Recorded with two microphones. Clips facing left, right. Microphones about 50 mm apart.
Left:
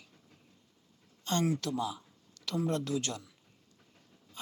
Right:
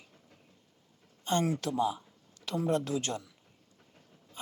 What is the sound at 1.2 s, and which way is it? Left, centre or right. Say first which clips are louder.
Speech: right 1 dB; centre.